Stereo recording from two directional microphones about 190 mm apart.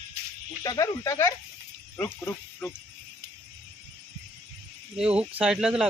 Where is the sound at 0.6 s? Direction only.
20° left (ahead or behind).